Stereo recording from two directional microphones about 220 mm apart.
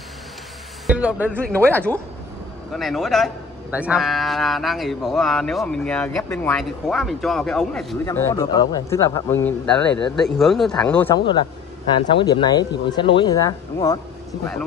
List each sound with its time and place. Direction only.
0.8 s speech: 5° right (ahead or behind)
1.5 s a man's voice: 5° left (ahead or behind)
8.0 s a man's voice: 10° left (ahead or behind)
11.1 s speech: 20° left (ahead or behind)